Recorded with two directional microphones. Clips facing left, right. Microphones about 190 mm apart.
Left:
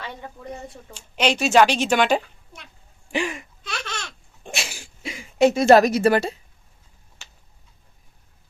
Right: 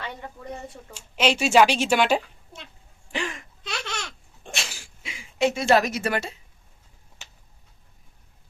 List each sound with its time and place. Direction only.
0.9 s a woman's voice: 5° right (ahead or behind)
3.1 s speech: 10° left (ahead or behind)
3.6 s laughter: 20° right (ahead or behind)
4.4 s dog: 10° left (ahead or behind)
5.0 s speech: 40° left (ahead or behind)
7.2 s a sound: 20° right (ahead or behind)